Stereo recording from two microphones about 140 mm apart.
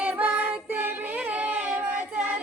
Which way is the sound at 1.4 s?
10° right (ahead or behind).